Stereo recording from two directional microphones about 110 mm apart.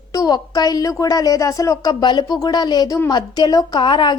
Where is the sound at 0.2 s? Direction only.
35° left (ahead or behind).